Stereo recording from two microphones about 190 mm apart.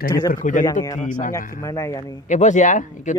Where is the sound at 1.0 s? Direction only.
40° left (ahead or behind).